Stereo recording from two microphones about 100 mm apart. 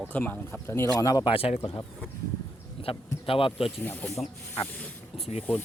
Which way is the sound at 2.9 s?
70° left (ahead or behind).